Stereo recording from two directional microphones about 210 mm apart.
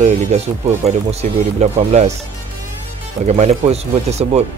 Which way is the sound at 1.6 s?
30° right (ahead or behind).